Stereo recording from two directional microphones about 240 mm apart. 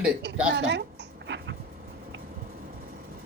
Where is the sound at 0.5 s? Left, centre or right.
Right.